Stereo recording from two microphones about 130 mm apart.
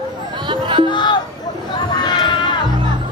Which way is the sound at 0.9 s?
35° left (ahead or behind).